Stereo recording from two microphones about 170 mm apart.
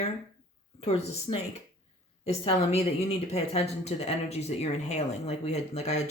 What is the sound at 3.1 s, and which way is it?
Speech, 40° left (ahead or behind).